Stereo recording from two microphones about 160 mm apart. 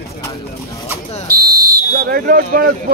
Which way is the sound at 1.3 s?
70° right (ahead or behind).